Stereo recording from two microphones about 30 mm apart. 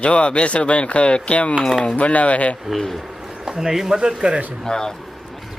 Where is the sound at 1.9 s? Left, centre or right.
Left.